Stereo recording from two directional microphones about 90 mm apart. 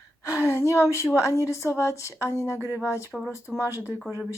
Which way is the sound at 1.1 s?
35° left (ahead or behind).